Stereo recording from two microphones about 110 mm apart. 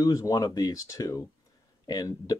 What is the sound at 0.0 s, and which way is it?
Speech, 35° left (ahead or behind).